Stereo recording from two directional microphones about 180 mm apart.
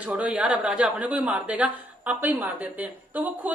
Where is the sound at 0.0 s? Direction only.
10° right (ahead or behind).